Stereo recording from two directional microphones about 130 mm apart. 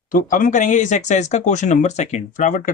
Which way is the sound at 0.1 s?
90° left.